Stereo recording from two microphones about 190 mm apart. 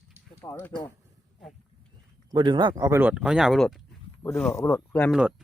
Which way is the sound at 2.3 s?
25° right (ahead or behind).